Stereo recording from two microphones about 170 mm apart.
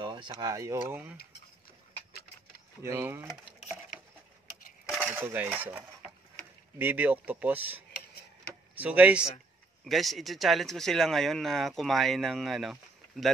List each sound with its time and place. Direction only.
0.0 s speech: 25° right (ahead or behind)
2.8 s speech: 15° right (ahead or behind)
4.8 s speech: 5° right (ahead or behind)